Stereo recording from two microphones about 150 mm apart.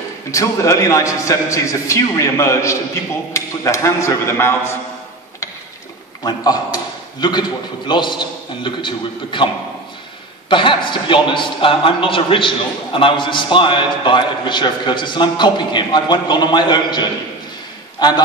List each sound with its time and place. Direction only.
0.3 s a man's voice: 20° left (ahead or behind)
6.2 s a man's voice: 25° left (ahead or behind)
10.5 s a man's voice: 35° left (ahead or behind)